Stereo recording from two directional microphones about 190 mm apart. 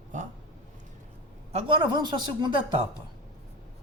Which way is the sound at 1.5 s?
25° right (ahead or behind).